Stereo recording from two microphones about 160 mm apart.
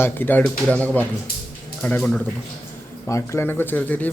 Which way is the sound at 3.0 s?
15° left (ahead or behind).